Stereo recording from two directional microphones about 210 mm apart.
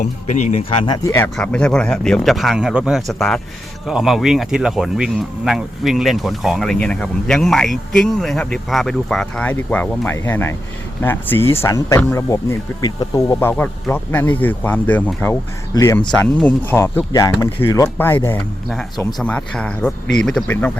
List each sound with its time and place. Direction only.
0.0 s speech: 35° left (ahead or behind)
1.0 s speech: 10° left (ahead or behind)